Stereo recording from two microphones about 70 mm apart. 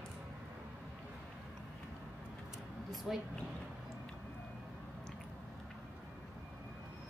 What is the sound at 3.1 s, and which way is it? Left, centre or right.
Speech, centre.